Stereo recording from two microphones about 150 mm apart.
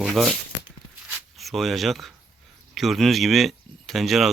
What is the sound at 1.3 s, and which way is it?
Speech, centre (ahead or behind).